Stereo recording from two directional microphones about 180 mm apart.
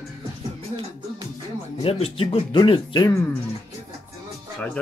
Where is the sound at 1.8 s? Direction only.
35° left (ahead or behind).